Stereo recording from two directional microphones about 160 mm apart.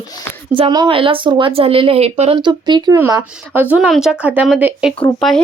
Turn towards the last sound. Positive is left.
turn(degrees=0)  # may be behind; listen again after turning